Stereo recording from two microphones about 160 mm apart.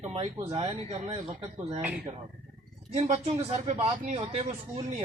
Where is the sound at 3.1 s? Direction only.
40° right (ahead or behind).